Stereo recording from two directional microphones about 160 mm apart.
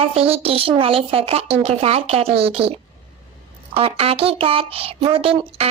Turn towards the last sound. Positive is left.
turn(degrees=-35)  # may be behind; listen again after turning